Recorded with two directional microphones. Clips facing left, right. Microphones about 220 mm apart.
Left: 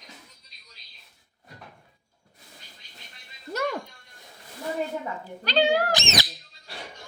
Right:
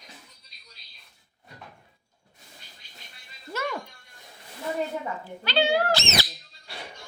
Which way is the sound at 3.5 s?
40° left (ahead or behind).